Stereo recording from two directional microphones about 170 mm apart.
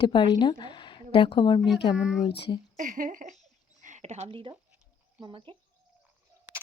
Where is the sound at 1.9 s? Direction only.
5° right (ahead or behind).